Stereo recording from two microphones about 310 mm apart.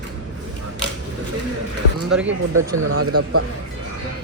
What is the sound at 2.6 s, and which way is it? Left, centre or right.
Speech, right.